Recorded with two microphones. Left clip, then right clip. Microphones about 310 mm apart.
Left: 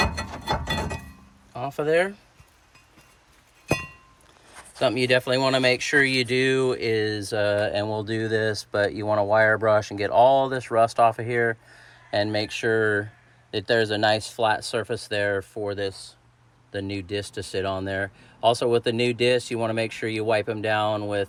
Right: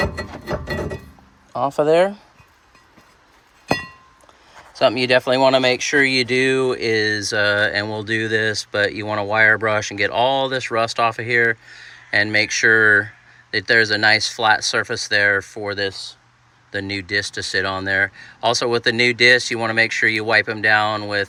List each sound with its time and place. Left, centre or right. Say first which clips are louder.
1.5 s speech: right 7 dB; centre
4.8 s speech: right 6 dB; centre
14.1 s speech: right 7 dB; centre